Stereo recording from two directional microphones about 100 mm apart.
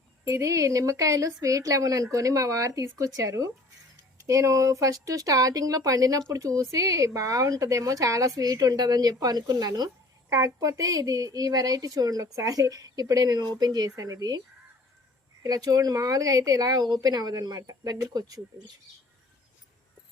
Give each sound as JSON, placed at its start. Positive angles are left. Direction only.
{"t": 0.3, "sound": "speech", "side_deg": -30}
{"t": 15.4, "sound": "speech", "side_deg": -40}